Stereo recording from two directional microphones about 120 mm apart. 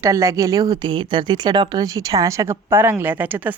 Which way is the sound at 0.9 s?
40° right (ahead or behind).